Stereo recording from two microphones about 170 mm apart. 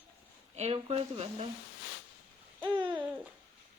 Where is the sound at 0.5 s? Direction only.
35° right (ahead or behind).